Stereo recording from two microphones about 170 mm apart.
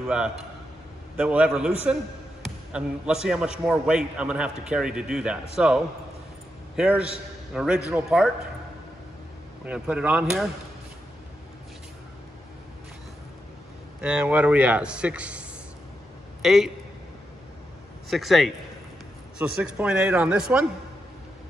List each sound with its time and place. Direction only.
0.0 s a man's voice: 5° right (ahead or behind)
6.8 s a man's voice: 5° right (ahead or behind)
9.7 s a man's voice: 5° right (ahead or behind)
14.0 s a man's voice: 5° right (ahead or behind)
16.4 s a man's voice: centre (ahead or behind)
18.1 s a man's voice: centre (ahead or behind)